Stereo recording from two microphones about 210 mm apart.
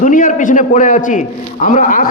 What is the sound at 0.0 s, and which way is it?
A man's voice, 40° left (ahead or behind).